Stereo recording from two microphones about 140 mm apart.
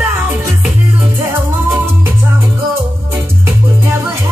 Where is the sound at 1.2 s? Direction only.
20° right (ahead or behind).